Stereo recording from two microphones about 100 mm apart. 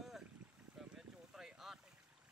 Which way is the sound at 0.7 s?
5° right (ahead or behind).